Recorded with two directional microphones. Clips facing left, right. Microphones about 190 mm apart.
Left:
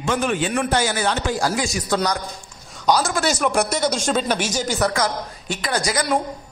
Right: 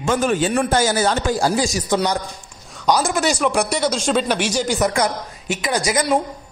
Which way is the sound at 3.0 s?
20° right (ahead or behind).